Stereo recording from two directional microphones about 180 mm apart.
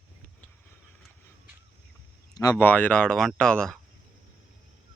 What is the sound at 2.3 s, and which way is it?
Speech, 20° left (ahead or behind).